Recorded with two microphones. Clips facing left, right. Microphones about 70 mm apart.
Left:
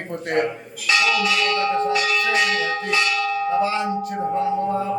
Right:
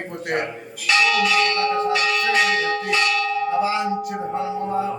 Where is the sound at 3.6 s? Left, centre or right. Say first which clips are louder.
Even; centre.